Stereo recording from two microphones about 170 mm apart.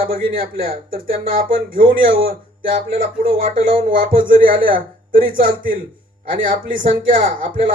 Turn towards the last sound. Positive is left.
turn(degrees=-50)  # may be behind; listen again after turning